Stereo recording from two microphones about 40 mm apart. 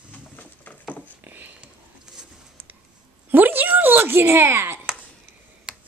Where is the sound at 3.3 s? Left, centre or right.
Right.